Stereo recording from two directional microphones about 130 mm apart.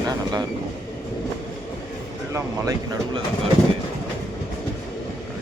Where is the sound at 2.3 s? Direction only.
25° right (ahead or behind).